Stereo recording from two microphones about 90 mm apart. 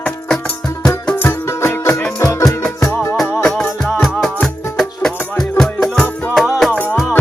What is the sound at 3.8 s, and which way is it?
Music, centre (ahead or behind).